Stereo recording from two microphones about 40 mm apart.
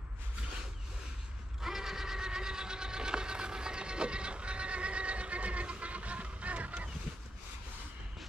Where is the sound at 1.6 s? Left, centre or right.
Centre; by 6.9 s right.